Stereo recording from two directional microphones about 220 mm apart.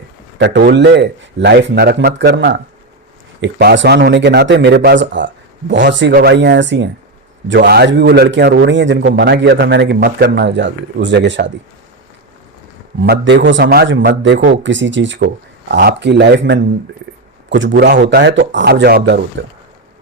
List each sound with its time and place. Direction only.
0.3 s a man's voice: 50° right (ahead or behind)
13.0 s a man's voice: 55° right (ahead or behind)